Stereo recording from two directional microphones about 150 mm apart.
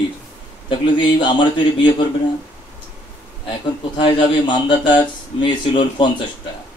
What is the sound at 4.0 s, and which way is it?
A man's voice, 35° left (ahead or behind).